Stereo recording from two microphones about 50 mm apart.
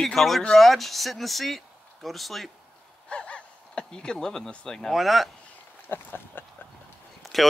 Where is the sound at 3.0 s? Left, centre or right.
Left.